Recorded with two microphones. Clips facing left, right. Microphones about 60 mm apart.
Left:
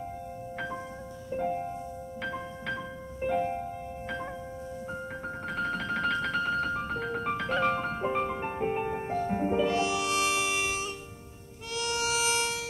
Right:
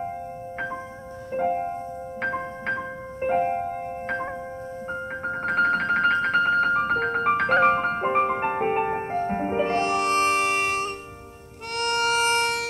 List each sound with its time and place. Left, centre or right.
1.3 s music: right